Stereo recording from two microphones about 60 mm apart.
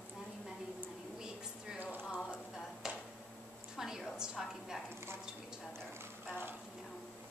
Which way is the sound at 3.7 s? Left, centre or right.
Centre.